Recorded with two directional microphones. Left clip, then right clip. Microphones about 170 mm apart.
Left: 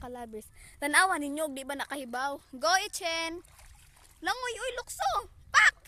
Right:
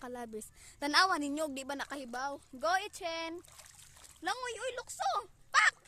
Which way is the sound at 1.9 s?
35° left (ahead or behind).